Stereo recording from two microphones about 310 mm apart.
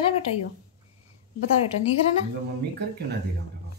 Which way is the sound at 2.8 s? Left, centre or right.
Right.